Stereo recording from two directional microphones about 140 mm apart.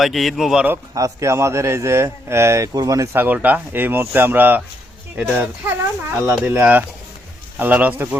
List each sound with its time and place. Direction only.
0.0 s speech: centre (ahead or behind)
0.9 s a man's voice: 20° right (ahead or behind)